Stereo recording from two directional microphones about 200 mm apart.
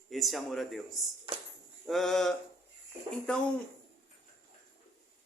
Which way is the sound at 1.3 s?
25° right (ahead or behind).